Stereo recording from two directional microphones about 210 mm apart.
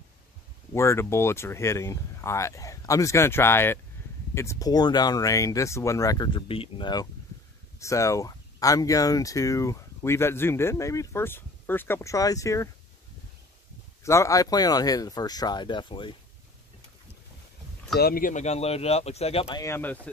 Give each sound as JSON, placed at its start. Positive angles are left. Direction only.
{"t": 0.7, "sound": "speech", "side_deg": 15}
{"t": 14.0, "sound": "speech", "side_deg": 15}
{"t": 17.9, "sound": "speech", "side_deg": 45}
{"t": 19.5, "sound": "speech", "side_deg": 15}